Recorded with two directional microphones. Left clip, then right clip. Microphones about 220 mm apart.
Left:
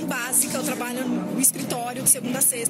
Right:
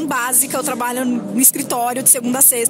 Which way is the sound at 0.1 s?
45° right (ahead or behind).